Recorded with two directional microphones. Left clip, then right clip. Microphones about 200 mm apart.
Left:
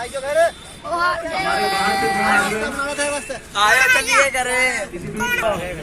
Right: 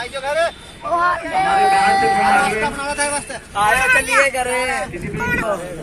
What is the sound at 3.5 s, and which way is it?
Speech, 35° right (ahead or behind).